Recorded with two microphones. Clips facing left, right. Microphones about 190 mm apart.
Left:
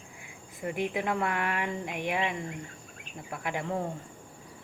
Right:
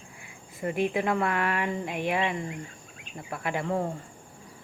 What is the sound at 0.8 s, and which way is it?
Speech, 15° left (ahead or behind).